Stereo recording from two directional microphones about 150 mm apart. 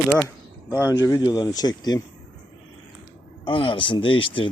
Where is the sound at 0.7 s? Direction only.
15° right (ahead or behind).